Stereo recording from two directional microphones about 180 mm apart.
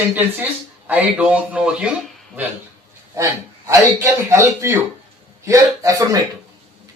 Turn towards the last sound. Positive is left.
turn(degrees=-15)  # may be behind; listen again after turning